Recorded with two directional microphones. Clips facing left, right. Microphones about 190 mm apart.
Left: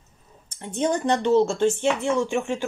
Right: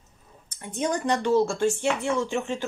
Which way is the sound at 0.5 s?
30° left (ahead or behind).